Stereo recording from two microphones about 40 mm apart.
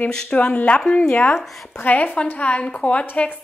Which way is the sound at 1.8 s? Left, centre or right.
Left.